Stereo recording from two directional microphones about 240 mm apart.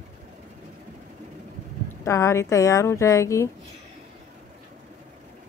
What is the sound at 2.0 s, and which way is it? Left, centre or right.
Speech, centre.